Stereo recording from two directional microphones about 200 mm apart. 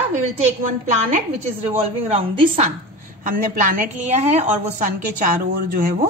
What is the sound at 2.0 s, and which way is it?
Speech, 30° right (ahead or behind).